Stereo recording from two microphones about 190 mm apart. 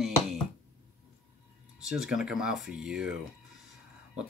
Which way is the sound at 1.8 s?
5° right (ahead or behind).